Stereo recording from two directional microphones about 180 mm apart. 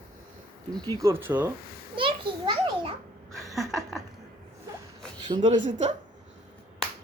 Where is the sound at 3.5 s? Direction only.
Centre (ahead or behind).